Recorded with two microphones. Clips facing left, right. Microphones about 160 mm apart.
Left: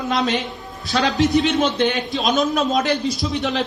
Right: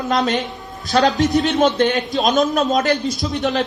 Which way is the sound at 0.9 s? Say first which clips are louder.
Right 3 dB; 45° right (ahead or behind).